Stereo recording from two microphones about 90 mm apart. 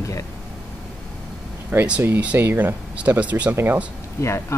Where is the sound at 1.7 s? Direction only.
20° right (ahead or behind).